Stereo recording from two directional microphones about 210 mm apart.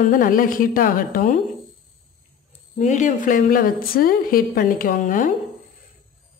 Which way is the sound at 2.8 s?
35° left (ahead or behind).